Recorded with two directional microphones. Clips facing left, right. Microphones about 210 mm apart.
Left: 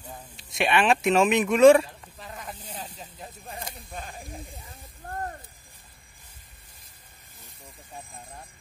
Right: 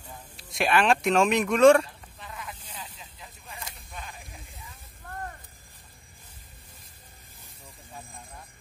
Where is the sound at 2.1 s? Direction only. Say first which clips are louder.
Left 1 dB; 40° left (ahead or behind).